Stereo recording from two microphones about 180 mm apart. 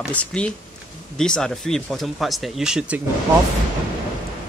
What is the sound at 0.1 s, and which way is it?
Speech, 5° left (ahead or behind).